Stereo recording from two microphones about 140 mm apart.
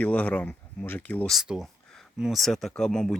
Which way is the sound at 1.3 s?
5° right (ahead or behind).